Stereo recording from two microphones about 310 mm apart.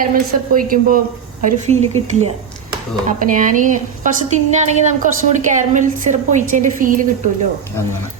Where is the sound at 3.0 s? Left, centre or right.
Right.